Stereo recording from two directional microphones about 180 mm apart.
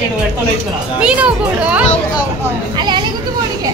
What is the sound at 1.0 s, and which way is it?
Speech, 5° right (ahead or behind).